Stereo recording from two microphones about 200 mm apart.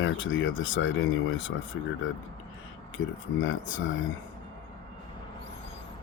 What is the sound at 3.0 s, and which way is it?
Speech, 85° left.